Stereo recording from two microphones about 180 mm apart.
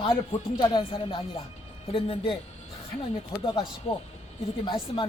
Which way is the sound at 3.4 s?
25° left (ahead or behind).